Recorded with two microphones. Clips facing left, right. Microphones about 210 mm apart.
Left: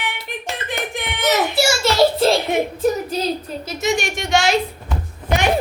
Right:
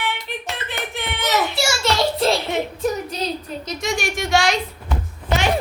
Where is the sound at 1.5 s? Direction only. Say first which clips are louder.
Left 5 dB; centre (ahead or behind).